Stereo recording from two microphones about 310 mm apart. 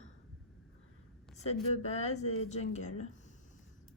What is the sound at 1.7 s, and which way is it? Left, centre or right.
A woman's voice, left.